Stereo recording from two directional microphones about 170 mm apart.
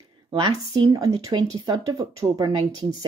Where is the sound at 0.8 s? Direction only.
20° right (ahead or behind).